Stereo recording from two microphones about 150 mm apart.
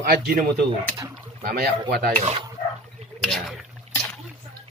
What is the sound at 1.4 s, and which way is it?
Speech, 75° right (ahead or behind).